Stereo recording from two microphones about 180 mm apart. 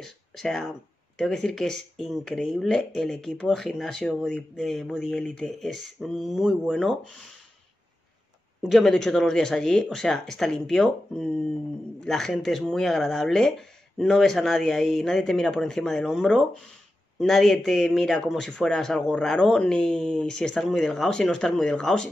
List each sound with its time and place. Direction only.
0.0 s speech: centre (ahead or behind)
8.6 s speech: centre (ahead or behind)